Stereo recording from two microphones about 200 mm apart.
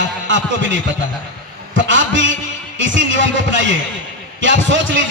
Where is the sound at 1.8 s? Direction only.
70° right (ahead or behind).